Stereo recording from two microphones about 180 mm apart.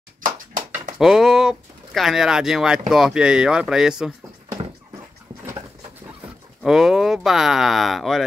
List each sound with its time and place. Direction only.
0.2 s a sound: 50° right (ahead or behind)
0.9 s speech: centre (ahead or behind)
6.6 s speech: centre (ahead or behind)